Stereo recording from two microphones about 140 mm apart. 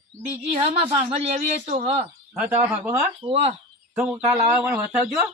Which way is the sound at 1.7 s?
45° right (ahead or behind).